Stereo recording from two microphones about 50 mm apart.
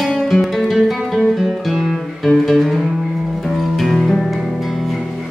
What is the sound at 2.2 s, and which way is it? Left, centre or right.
Music, centre.